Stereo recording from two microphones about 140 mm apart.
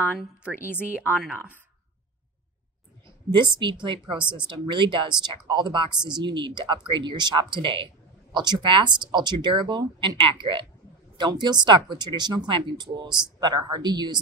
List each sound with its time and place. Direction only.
0.7 s speech: 15° left (ahead or behind)
3.3 s speech: 35° right (ahead or behind)